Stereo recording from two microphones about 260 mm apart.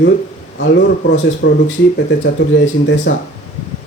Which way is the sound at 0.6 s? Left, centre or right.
Left.